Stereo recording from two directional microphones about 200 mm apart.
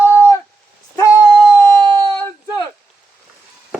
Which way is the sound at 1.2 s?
5° right (ahead or behind).